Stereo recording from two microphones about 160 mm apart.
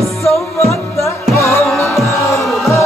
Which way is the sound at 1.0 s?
15° left (ahead or behind).